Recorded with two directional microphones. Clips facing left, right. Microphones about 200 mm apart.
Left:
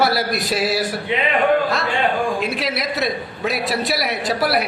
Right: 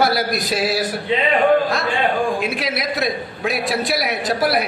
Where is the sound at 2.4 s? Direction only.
Centre (ahead or behind).